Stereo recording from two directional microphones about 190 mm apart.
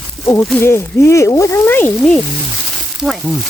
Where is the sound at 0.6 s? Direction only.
15° left (ahead or behind).